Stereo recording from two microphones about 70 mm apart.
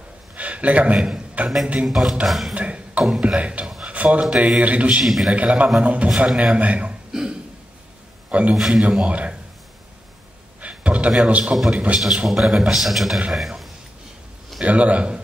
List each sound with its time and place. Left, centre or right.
0.4 s a sound: centre
0.9 s a man's voice: centre
2.2 s a man's voice: centre
2.5 s beatboxing: centre
3.2 s speech: centre
5.0 s a man's voice: centre
5.3 s a man's voice: centre
7.1 s a sound: centre
8.3 s a man's voice: centre
8.5 s speech: centre
10.6 s a sound: centre
11.7 s a man's voice: centre
12.0 s a man's voice: centre
14.6 s a man's voice: centre